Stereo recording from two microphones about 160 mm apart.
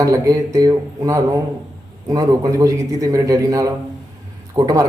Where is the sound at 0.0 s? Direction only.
20° right (ahead or behind).